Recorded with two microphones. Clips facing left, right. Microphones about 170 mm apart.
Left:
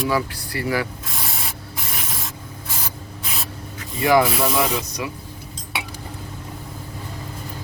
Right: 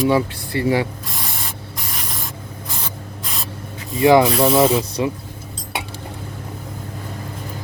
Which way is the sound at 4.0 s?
20° right (ahead or behind).